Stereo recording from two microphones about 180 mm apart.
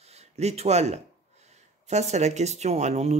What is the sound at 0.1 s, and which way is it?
Speech, 35° right (ahead or behind).